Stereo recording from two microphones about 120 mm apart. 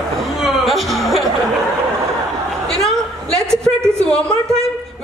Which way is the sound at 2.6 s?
5° left (ahead or behind).